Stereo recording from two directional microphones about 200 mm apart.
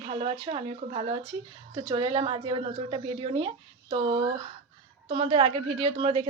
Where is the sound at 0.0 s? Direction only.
30° right (ahead or behind).